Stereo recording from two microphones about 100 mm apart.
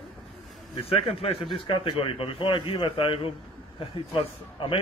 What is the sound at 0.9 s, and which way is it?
A man's voice, 75° left (ahead or behind).